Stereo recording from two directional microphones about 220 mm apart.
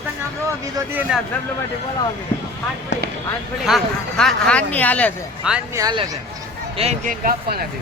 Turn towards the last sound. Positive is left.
turn(degrees=-40)  # may be behind; listen again after turning